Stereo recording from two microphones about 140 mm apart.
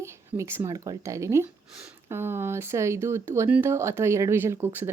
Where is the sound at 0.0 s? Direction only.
20° right (ahead or behind).